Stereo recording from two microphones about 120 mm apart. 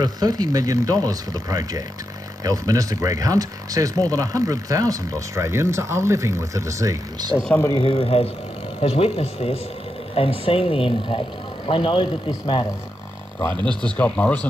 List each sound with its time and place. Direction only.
0.0 s speech: 35° right (ahead or behind)
7.7 s speech: 50° left (ahead or behind)
13.4 s speech: 15° left (ahead or behind)